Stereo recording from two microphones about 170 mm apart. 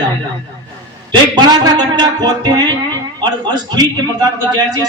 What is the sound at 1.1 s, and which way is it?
A man's voice, 25° right (ahead or behind).